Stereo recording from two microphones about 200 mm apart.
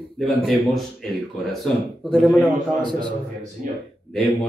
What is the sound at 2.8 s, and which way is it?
Speech, 20° right (ahead or behind).